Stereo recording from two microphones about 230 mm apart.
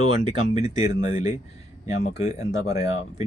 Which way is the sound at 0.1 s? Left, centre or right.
Left.